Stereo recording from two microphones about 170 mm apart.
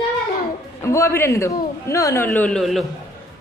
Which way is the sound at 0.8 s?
15° left (ahead or behind).